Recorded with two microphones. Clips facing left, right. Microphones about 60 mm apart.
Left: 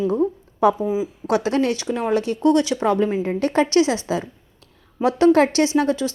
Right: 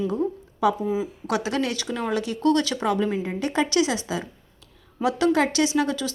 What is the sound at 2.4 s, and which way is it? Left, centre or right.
Speech, left.